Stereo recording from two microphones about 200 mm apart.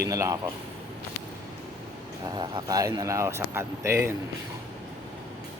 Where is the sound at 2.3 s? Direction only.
20° right (ahead or behind).